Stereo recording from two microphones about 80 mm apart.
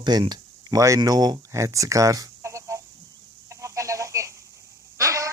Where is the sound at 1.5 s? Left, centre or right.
Right.